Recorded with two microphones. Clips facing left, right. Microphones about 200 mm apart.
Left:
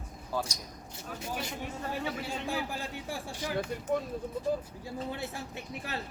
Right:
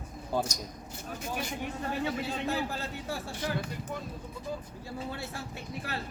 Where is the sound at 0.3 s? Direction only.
25° right (ahead or behind).